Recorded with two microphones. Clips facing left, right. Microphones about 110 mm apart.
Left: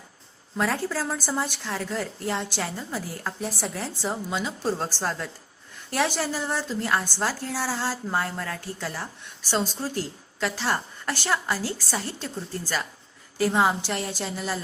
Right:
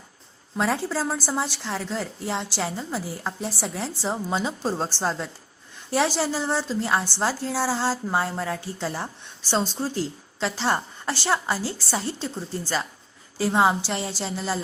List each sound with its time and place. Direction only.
0.7 s a woman's voice: 10° right (ahead or behind)
3.4 s speech: centre (ahead or behind)
4.3 s a woman's voice: 30° right (ahead or behind)
4.9 s a woman's voice: 15° right (ahead or behind)
13.4 s a woman's voice: 10° right (ahead or behind)